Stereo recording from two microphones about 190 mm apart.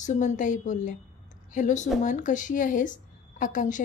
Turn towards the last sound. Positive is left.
turn(degrees=45)  # may be behind; listen again after turning